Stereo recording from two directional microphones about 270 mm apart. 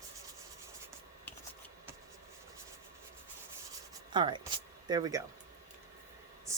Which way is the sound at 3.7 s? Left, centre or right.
Centre.